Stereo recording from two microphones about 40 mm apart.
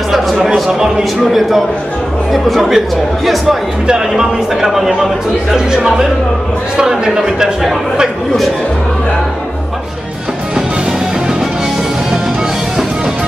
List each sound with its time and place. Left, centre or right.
0.7 s speech: centre
2.3 s speech: centre
4.6 s speech: centre